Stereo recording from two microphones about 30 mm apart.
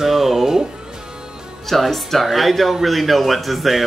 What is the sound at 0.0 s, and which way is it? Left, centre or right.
Music, centre.